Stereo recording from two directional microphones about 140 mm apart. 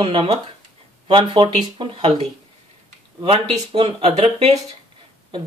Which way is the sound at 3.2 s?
40° right (ahead or behind).